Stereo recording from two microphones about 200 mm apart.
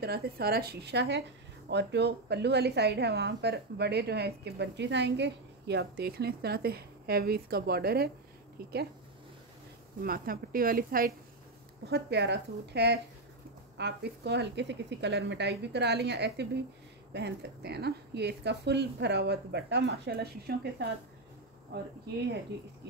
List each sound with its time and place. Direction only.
0.0 s a woman's voice: 50° right (ahead or behind)
10.0 s speech: 45° right (ahead or behind)
11.9 s a woman's voice: 55° right (ahead or behind)